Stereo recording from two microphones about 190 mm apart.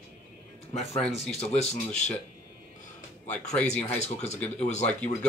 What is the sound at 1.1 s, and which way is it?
Speech, 35° left (ahead or behind).